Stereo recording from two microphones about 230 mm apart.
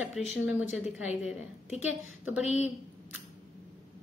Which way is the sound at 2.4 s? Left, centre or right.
Left.